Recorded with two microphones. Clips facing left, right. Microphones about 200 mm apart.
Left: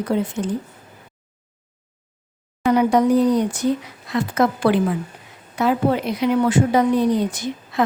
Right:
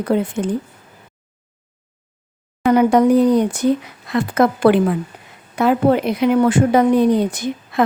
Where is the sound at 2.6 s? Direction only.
55° right (ahead or behind).